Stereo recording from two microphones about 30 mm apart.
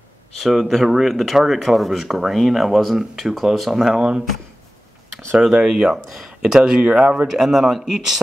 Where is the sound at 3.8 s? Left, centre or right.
Centre.